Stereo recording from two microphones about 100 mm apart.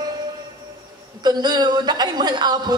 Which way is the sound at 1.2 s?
45° right (ahead or behind).